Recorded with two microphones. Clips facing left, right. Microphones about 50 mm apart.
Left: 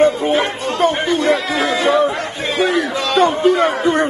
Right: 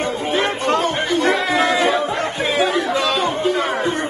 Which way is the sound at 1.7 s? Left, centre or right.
Centre.